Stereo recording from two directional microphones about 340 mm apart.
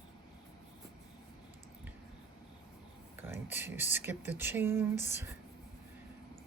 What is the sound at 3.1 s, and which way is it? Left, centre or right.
Speech, centre.